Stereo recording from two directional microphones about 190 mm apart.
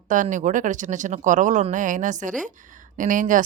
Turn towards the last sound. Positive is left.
turn(degrees=-45)  # may be behind; listen again after turning